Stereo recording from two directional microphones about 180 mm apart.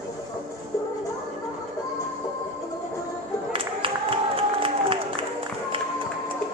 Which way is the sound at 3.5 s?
30° right (ahead or behind).